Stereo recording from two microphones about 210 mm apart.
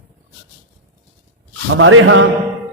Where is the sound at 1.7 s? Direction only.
70° right (ahead or behind).